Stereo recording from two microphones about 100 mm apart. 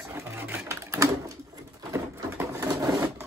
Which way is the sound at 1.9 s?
30° right (ahead or behind).